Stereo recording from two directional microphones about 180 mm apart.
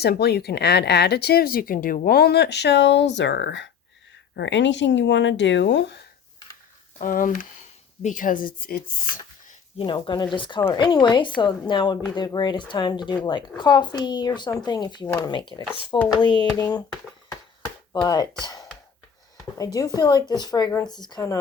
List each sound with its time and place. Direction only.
0.0 s speech: 65° left (ahead or behind)
7.0 s speech: 50° left (ahead or behind)
9.7 s speech: 30° left (ahead or behind)
17.9 s speech: 20° left (ahead or behind)
18.4 s a sound: 20° left (ahead or behind)
19.5 s speech: 20° left (ahead or behind)